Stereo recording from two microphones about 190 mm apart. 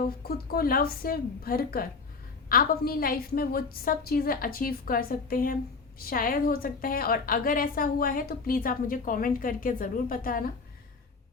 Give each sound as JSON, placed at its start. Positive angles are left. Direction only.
{"t": 0.0, "sound": "a woman's voice", "side_deg": 50}